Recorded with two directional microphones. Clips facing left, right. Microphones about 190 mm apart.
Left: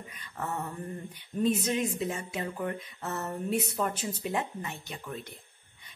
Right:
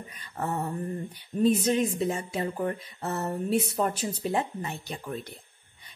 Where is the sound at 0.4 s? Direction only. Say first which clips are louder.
Right 5 dB; 35° right (ahead or behind).